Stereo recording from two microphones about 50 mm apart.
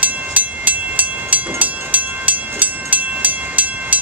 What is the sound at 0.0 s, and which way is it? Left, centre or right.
Train, right.